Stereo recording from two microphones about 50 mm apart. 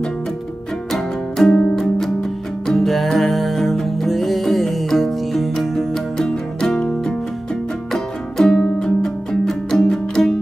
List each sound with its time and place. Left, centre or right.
0.9 s music: centre